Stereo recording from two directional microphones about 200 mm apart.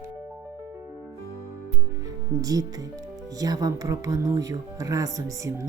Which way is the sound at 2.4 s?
15° right (ahead or behind).